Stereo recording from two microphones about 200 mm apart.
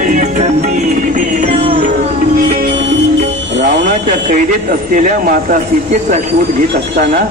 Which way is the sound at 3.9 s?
40° right (ahead or behind).